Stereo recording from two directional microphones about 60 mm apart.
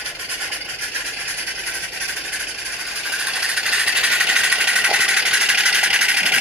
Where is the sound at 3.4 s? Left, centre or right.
Centre.